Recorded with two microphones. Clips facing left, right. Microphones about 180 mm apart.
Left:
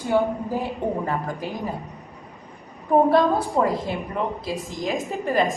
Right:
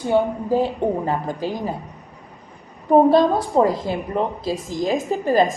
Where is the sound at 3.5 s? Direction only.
35° right (ahead or behind).